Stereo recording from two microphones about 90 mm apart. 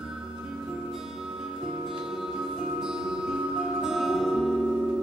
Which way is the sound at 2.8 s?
5° right (ahead or behind).